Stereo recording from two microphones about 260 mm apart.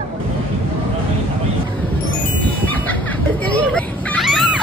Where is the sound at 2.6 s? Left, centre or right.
Centre.